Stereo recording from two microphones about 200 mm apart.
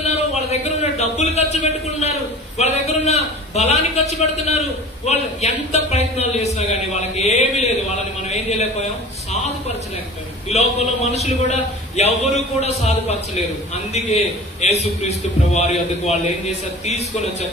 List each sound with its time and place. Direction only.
0.0 s a man's voice: 35° left (ahead or behind)
10.5 s a man's voice: 30° left (ahead or behind)